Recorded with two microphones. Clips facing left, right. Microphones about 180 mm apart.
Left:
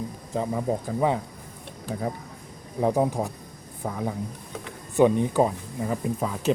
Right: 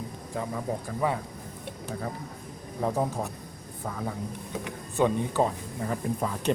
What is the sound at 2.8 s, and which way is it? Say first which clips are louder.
Speech: left 5 dB; 15° left (ahead or behind).